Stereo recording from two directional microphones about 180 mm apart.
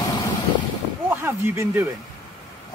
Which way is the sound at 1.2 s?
15° right (ahead or behind).